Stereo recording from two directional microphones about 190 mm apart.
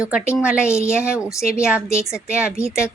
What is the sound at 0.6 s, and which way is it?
A woman's voice, 15° left (ahead or behind).